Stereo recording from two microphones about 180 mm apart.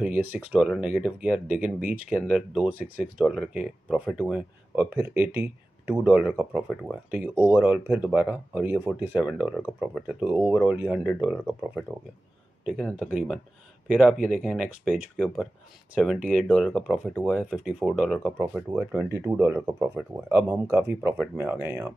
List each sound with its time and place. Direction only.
0.0 s speech: 10° right (ahead or behind)
1.5 s speech: 50° right (ahead or behind)
2.2 s speech: 5° right (ahead or behind)
6.7 s speech: 5° left (ahead or behind)
7.1 s speech: 10° right (ahead or behind)
15.1 s speech: 5° left (ahead or behind); by 21.9 s 15° right (ahead or behind)